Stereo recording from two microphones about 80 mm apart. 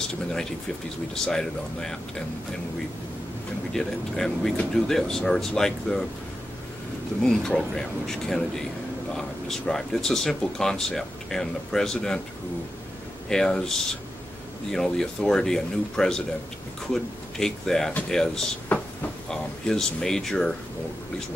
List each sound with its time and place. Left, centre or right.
0.1 s speech: centre
3.7 s speech: centre
7.2 s speech: centre
13.3 s speech: centre
18.7 s a sound: centre
19.2 s speech: centre